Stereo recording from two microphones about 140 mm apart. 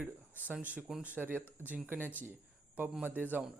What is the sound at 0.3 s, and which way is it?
Speech, 10° right (ahead or behind).